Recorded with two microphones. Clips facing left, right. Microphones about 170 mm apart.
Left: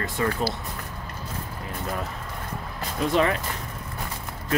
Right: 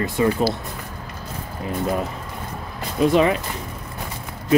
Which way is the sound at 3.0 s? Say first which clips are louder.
Right 6 dB; 15° right (ahead or behind).